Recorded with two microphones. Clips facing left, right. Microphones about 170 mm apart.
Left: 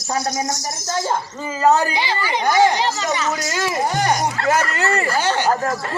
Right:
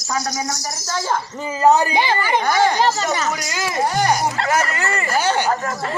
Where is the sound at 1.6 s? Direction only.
15° right (ahead or behind).